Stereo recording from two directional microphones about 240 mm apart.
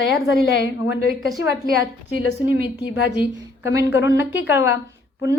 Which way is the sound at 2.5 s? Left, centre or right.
Left.